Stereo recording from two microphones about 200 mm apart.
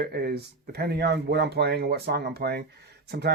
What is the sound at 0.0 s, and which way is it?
Speech, 50° right (ahead or behind).